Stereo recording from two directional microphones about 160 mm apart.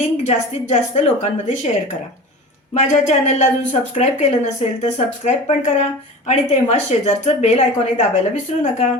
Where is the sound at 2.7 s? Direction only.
45° left (ahead or behind).